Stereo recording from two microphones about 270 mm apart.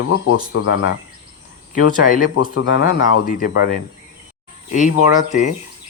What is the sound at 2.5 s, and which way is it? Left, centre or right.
Speech, left.